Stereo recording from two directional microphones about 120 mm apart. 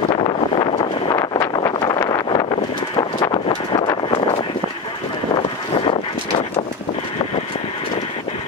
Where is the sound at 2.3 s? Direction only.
45° left (ahead or behind).